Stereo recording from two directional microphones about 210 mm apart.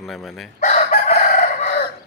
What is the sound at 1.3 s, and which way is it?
Chicken, 45° left (ahead or behind).